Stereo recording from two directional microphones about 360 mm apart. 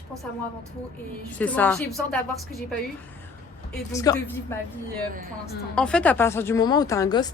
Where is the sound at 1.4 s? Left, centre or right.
Centre.